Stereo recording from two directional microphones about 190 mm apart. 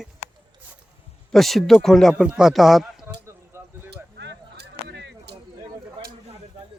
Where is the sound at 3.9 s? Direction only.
65° right (ahead or behind).